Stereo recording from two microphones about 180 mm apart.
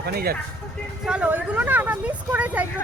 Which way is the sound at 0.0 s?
60° right (ahead or behind).